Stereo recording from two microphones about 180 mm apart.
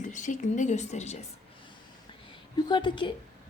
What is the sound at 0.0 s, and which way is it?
Speech, 45° left (ahead or behind).